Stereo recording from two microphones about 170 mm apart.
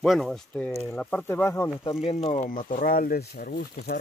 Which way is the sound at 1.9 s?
40° left (ahead or behind).